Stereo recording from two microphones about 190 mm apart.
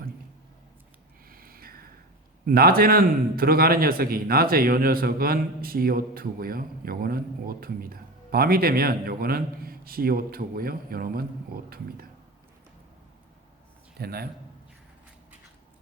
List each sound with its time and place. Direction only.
1.3 s a sound: 50° right (ahead or behind)
2.5 s a man's voice: 50° right (ahead or behind)
14.0 s a man's voice: 55° right (ahead or behind)